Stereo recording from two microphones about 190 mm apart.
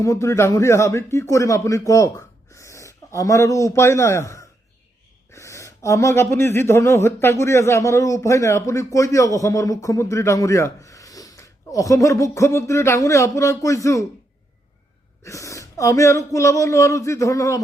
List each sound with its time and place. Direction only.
0.0 s speech: 15° left (ahead or behind)
15.2 s speech: 15° left (ahead or behind)